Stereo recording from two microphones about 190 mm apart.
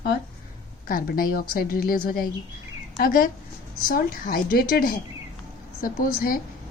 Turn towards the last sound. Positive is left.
turn(degrees=50)  # may be behind; listen again after turning